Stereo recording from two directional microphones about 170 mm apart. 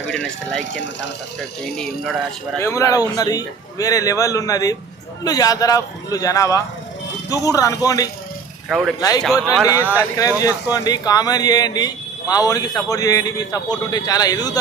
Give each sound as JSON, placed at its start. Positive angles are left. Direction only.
{"t": 0.1, "sound": "speech", "side_deg": 5}
{"t": 1.6, "sound": "speech", "side_deg": 0}
{"t": 2.6, "sound": "speech", "side_deg": 15}